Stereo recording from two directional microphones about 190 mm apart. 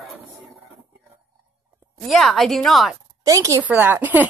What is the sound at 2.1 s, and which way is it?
Speech, centre (ahead or behind).